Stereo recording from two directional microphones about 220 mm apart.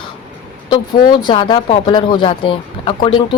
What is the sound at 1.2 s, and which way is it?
Speech, 20° left (ahead or behind).